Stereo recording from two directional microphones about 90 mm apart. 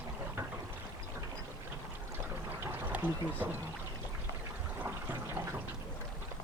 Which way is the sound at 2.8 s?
20° right (ahead or behind).